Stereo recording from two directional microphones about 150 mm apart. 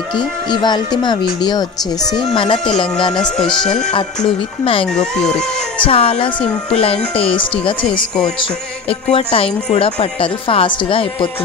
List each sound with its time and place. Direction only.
0.5 s a woman's voice: 30° left (ahead or behind)
5.2 s speech: 5° left (ahead or behind)
5.9 s a woman's voice: 40° left (ahead or behind)
9.1 s a woman's voice: 40° left (ahead or behind)